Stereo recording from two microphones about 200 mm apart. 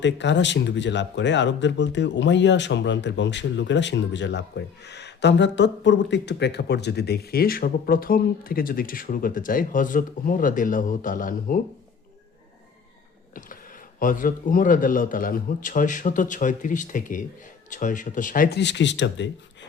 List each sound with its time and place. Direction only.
0.0 s speech: 60° left (ahead or behind); by 11.6 s 45° left (ahead or behind)
14.0 s a man's voice: 45° left (ahead or behind); by 19.3 s 65° left (ahead or behind)